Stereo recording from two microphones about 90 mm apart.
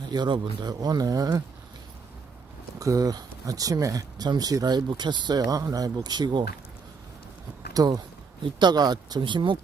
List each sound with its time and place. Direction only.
0.1 s speech: 55° right (ahead or behind)
2.7 s speech: 40° right (ahead or behind); by 6.4 s 55° right (ahead or behind)
7.7 s speech: 45° right (ahead or behind); by 9.6 s 65° right (ahead or behind)